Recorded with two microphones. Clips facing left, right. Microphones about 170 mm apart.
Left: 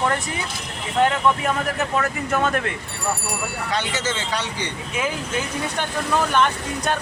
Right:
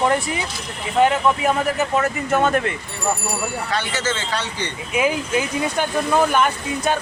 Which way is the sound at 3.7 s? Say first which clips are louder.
Even; 20° left (ahead or behind).